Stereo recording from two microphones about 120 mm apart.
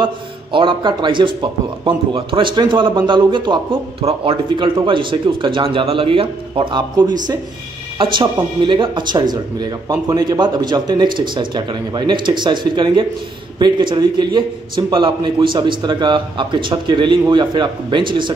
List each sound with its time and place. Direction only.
0.0 s a man's voice: 45° right (ahead or behind)